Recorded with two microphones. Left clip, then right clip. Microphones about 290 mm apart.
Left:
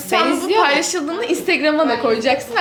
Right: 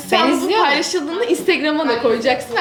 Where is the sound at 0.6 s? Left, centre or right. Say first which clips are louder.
Left 3 dB; left.